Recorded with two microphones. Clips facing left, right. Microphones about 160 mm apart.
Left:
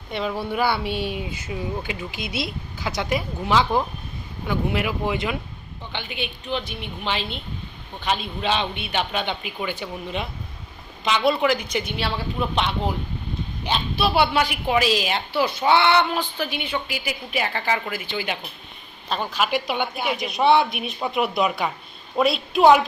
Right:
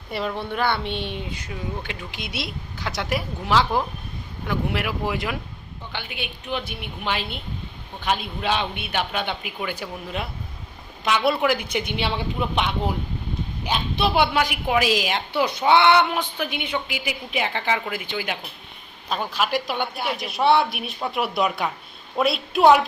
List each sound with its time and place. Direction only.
0.1 s a woman's voice: centre (ahead or behind)
13.9 s a woman's voice: 15° right (ahead or behind); by 22.8 s centre (ahead or behind)